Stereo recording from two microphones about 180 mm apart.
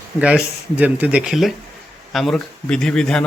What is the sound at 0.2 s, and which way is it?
Speech, 5° right (ahead or behind).